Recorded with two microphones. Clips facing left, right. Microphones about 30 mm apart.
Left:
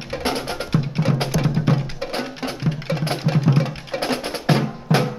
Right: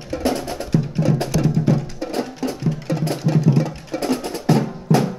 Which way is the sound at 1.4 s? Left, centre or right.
Left.